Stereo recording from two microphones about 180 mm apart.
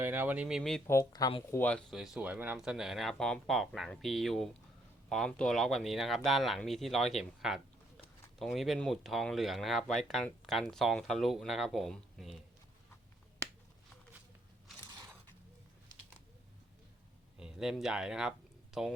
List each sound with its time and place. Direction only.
0.0 s speech: 10° right (ahead or behind)
0.9 s speech: 20° left (ahead or behind)
1.5 s speech: 5° left (ahead or behind)
17.3 s speech: 5° right (ahead or behind)